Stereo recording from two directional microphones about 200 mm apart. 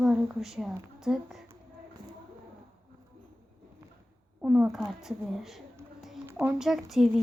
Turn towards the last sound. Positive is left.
turn(degrees=0)  # may be behind; listen again after turning